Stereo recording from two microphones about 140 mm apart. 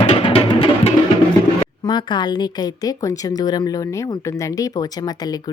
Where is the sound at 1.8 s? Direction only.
30° left (ahead or behind).